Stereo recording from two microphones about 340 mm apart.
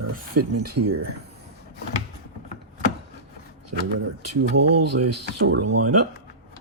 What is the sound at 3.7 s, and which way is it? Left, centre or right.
Speech, right.